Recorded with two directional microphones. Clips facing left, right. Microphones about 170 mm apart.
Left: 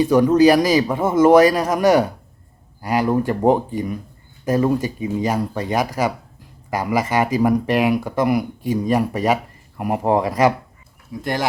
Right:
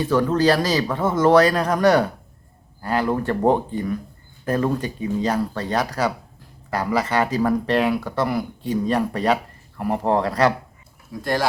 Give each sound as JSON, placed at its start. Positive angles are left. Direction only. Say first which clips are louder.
{"t": 0.0, "sound": "speech", "louder": "left 5 dB", "side_deg": 10}